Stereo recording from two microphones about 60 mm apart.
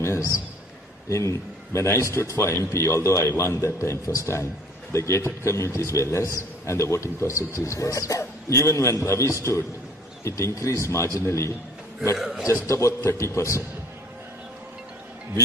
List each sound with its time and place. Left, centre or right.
0.0 s a man's voice: left
5.7 s a man's voice: left
8.2 s a man's voice: left
10.9 s a man's voice: left
12.2 s a man's voice: centre
12.6 s a man's voice: left